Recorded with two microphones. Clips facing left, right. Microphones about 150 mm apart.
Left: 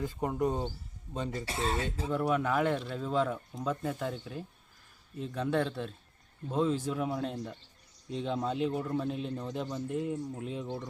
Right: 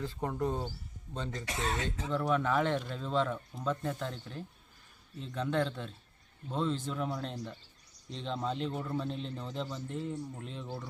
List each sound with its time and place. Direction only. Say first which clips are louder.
0.0 s a man's voice: left 3 dB; 15° left (ahead or behind)
1.5 s speech: left 2 dB; 30° left (ahead or behind)
2.0 s a man's voice: left 1 dB; 10° left (ahead or behind)